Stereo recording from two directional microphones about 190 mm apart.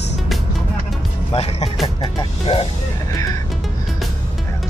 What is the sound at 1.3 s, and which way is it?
Speech, 35° left (ahead or behind).